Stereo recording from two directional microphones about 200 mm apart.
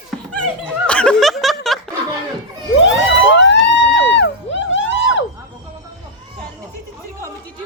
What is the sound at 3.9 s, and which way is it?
Music, 60° left (ahead or behind).